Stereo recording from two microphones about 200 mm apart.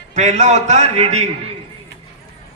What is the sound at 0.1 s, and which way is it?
A man's voice, 35° right (ahead or behind).